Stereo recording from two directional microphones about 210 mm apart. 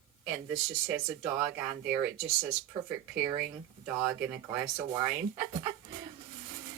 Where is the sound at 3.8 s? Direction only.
5° right (ahead or behind).